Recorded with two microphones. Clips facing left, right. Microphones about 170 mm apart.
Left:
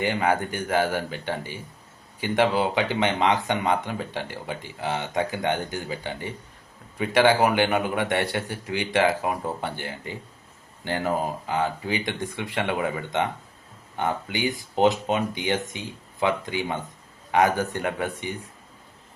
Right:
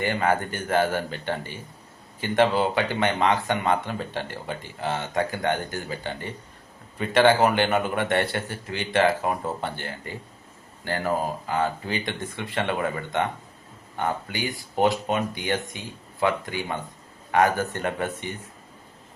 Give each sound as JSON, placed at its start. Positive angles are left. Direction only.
{"t": 0.0, "sound": "speech", "side_deg": 15}